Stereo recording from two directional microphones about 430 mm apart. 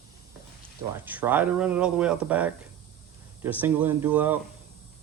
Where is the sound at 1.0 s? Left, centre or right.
Centre.